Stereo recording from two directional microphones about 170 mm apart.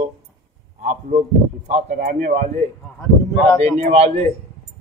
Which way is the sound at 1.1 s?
55° right (ahead or behind).